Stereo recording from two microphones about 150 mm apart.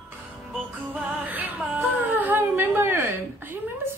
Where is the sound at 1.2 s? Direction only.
10° right (ahead or behind).